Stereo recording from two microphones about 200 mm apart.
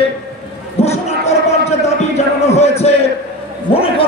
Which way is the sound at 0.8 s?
35° left (ahead or behind).